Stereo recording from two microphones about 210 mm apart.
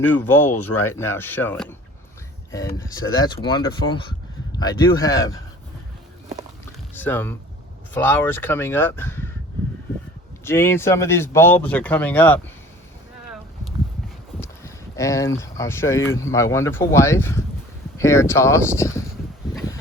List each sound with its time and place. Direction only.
0.1 s speech: 10° left (ahead or behind)
6.9 s speech: 10° left (ahead or behind)
10.4 s speech: 10° left (ahead or behind)
14.4 s speech: 15° left (ahead or behind)